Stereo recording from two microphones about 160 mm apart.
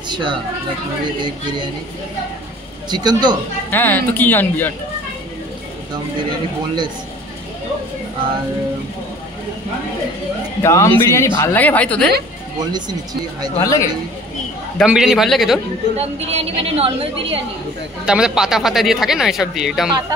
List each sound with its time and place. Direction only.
0.1 s speech: 30° right (ahead or behind)
2.9 s a woman's voice: 25° right (ahead or behind)
3.7 s speech: 10° left (ahead or behind)
10.6 s speech: 15° left (ahead or behind)
13.6 s a man's voice: 20° left (ahead or behind)
14.8 s speech: centre (ahead or behind)
16.0 s a woman's voice: 40° right (ahead or behind)
18.0 s speech: 5° right (ahead or behind)